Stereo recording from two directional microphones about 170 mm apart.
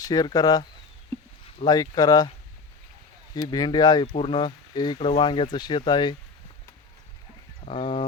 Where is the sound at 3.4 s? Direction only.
25° left (ahead or behind).